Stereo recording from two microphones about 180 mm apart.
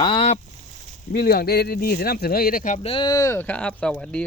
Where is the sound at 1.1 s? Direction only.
55° left (ahead or behind).